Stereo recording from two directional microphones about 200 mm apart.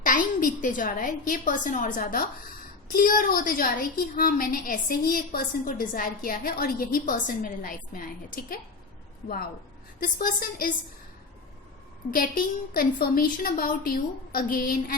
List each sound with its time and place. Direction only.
0.0 s a woman's voice: 40° left (ahead or behind)
10.0 s a woman's voice: 45° left (ahead or behind)
12.1 s a woman's voice: 45° left (ahead or behind)